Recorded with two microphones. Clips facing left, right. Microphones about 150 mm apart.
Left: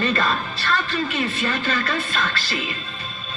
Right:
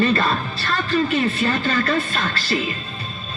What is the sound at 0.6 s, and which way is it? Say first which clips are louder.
Speech: right 4 dB; 40° right (ahead or behind).